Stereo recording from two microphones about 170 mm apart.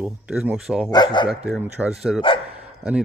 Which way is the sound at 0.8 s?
25° left (ahead or behind).